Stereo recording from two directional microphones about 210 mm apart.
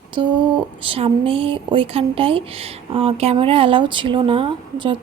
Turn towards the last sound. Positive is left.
turn(degrees=-25)  # may be behind; listen again after turning